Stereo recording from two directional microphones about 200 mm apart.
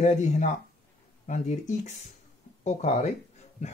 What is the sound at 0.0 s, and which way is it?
Speech, 35° left (ahead or behind).